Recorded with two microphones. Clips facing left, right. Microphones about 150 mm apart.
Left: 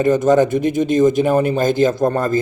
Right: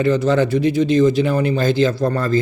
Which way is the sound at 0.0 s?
45° left (ahead or behind).